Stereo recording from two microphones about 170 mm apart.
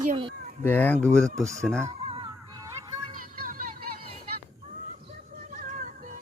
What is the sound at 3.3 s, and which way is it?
Vehicle, 55° right (ahead or behind).